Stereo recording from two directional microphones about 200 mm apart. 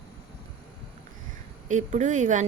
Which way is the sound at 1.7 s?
40° right (ahead or behind).